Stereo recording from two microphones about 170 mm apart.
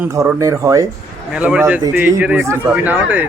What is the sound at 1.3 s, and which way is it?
Speech, 5° right (ahead or behind).